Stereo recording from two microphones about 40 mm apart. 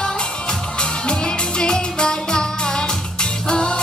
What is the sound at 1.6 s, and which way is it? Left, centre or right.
Music, left.